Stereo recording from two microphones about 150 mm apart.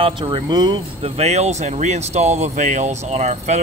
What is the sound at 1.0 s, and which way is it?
Speech, 45° right (ahead or behind).